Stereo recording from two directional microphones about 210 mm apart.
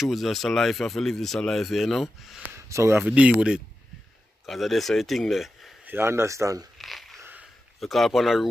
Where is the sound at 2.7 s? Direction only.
15° right (ahead or behind).